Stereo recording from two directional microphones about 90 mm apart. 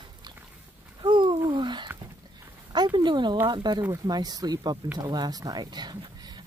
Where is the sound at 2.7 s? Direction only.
55° right (ahead or behind).